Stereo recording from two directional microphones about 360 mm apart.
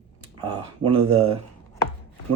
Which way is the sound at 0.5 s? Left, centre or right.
Right.